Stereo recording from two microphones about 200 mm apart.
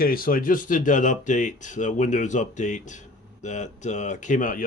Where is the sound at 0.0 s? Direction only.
45° left (ahead or behind).